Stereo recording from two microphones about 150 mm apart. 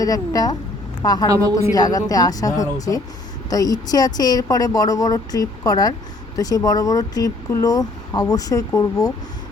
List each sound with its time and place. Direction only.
0.0 s speech: 25° left (ahead or behind)